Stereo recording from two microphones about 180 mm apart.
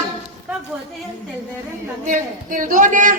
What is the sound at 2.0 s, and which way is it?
A man's voice, 45° right (ahead or behind).